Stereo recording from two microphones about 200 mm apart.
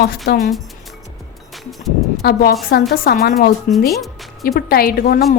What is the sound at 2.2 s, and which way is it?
A woman's voice, 50° left (ahead or behind).